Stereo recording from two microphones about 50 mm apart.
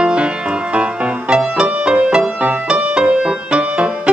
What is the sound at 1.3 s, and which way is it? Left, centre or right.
Music, centre.